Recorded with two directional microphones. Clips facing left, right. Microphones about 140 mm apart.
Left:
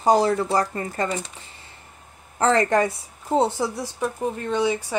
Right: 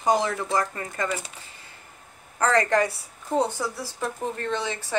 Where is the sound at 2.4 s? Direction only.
25° left (ahead or behind).